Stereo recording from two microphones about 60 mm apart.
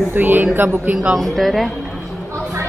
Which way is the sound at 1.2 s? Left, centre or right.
Centre.